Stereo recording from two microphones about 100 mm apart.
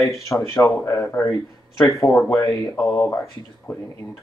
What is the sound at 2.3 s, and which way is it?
Speech, 30° left (ahead or behind).